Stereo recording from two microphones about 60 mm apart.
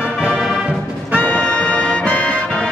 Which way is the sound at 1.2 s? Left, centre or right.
Centre.